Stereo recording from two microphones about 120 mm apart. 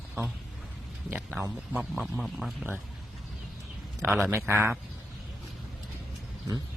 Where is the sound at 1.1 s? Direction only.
10° right (ahead or behind).